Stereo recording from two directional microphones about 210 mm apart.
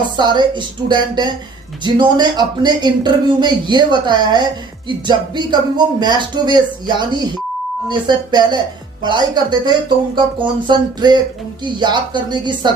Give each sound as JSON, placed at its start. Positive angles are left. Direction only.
{"t": 0.2, "sound": "speech", "side_deg": -20}